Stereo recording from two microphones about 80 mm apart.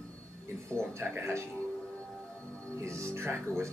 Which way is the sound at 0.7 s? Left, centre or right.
Right.